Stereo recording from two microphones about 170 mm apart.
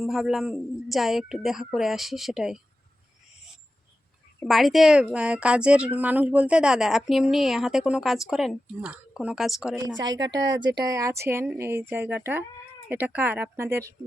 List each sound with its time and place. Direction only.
0.0 s speech: centre (ahead or behind)
4.4 s speech: centre (ahead or behind)
9.7 s speech: 20° right (ahead or behind)
10.2 s a woman's voice: 90° right
10.8 s speech: 20° right (ahead or behind)